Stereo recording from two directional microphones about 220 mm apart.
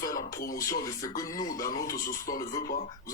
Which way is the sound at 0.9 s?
15° left (ahead or behind).